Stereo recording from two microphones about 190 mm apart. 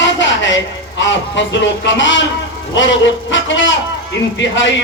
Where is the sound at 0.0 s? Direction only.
75° left (ahead or behind).